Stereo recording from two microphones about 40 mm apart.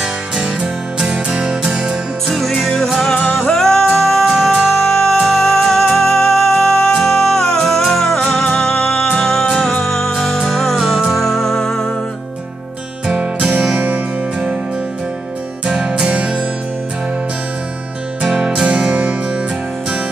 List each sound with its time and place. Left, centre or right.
1.1 s music: centre
2.2 s music: centre
13.0 s music: right
13.7 s music: right
15.6 s music: right
18.2 s music: right